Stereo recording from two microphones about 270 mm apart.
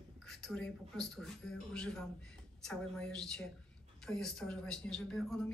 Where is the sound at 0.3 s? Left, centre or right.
Centre.